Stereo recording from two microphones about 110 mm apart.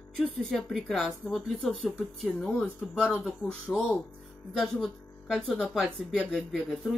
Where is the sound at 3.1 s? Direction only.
Centre (ahead or behind).